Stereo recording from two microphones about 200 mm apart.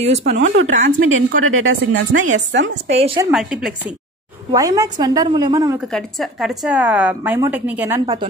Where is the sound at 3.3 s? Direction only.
Centre (ahead or behind).